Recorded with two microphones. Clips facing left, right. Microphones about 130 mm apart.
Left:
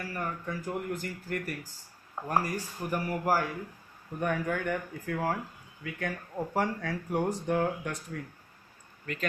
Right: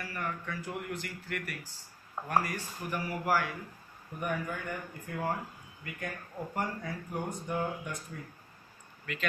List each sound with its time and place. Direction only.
0.0 s speech: 35° left (ahead or behind)
4.2 s speech: 80° left
9.1 s speech: 40° left (ahead or behind)